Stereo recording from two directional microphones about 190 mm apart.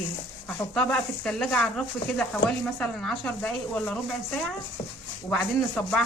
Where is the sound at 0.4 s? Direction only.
5° left (ahead or behind).